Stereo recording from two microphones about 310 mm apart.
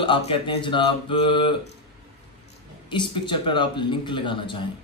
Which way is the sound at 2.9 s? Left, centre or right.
Centre.